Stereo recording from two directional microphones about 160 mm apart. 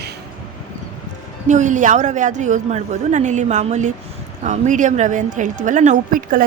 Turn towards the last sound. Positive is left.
turn(degrees=-60)  # may be behind; listen again after turning